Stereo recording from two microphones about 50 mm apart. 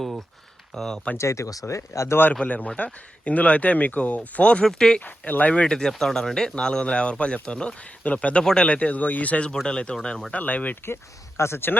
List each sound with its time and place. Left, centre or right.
0.8 s speech: centre
1.2 s speech: left
2.4 s speech: left
4.6 s speech: centre
4.9 s speech: left
5.9 s speech: centre; by 9.5 s left
9.6 s speech: centre
10.3 s speech: left
10.8 s speech: left